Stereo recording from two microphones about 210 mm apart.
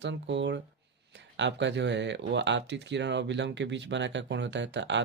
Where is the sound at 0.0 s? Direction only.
60° right (ahead or behind).